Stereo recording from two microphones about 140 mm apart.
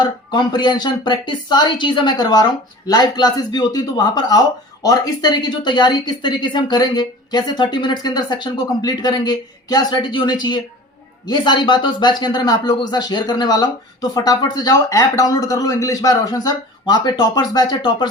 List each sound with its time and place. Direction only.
0.0 s a woman's voice: 35° left (ahead or behind)